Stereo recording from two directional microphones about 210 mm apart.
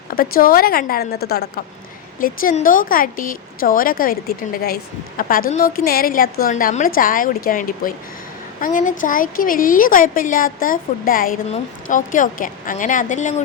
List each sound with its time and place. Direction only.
0.1 s a woman's voice: 45° left (ahead or behind)